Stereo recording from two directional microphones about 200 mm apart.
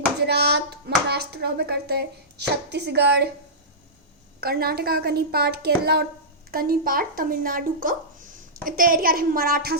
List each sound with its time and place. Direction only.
0.3 s speech: 55° right (ahead or behind)
4.4 s speech: 50° right (ahead or behind)